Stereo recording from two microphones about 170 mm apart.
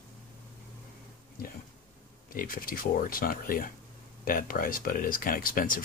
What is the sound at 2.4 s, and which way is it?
Speech, 55° left (ahead or behind).